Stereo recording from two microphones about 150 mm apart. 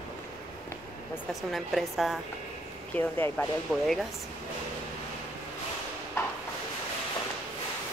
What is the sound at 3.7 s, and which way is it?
Speech, centre (ahead or behind).